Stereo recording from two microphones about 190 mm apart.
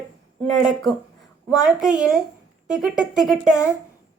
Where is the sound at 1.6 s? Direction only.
5° right (ahead or behind).